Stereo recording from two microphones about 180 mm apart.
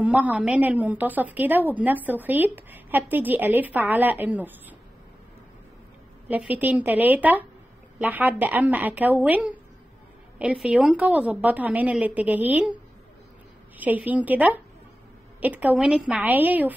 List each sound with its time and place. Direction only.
0.0 s a woman's voice: 10° right (ahead or behind)
6.2 s a woman's voice: 10° right (ahead or behind)